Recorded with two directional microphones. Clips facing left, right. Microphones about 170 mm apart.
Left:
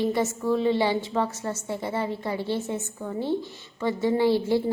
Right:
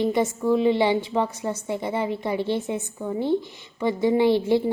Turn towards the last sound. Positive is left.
turn(degrees=-20)  # may be behind; listen again after turning